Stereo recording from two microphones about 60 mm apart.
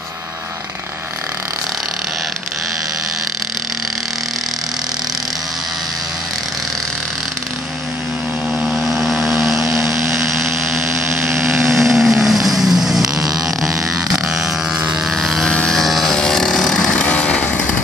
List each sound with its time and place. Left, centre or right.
8.5 s vehicle: centre
10.1 s blender: centre
11.7 s vehicle: centre
13.4 s a sound: centre
15.1 s vehicle: centre
16.2 s chainsaw: centre